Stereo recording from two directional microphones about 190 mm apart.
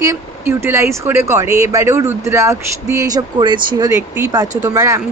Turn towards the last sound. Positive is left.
turn(degrees=-15)  # may be behind; listen again after turning